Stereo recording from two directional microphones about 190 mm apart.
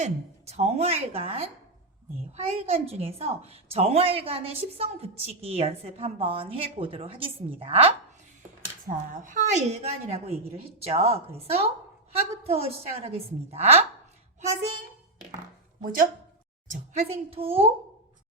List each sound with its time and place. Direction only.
0.0 s a woman's voice: 35° right (ahead or behind)
8.9 s a woman's voice: 40° right (ahead or behind)
15.8 s speech: 50° right (ahead or behind)
16.6 s a woman's voice: 35° right (ahead or behind)